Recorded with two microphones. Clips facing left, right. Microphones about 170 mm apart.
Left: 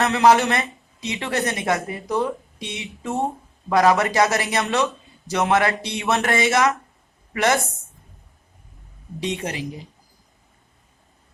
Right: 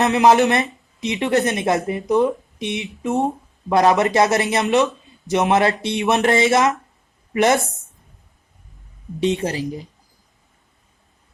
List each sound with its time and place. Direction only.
0.0 s speech: 20° right (ahead or behind)
9.4 s a woman's voice: 35° right (ahead or behind)